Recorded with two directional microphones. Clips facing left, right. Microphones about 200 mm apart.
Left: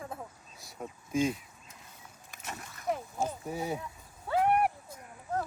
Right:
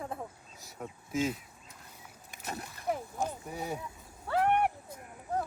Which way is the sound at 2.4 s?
35° right (ahead or behind).